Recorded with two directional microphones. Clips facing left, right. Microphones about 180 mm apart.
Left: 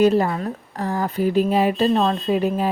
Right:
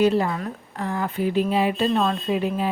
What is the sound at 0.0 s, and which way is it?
A woman's voice, 45° left (ahead or behind).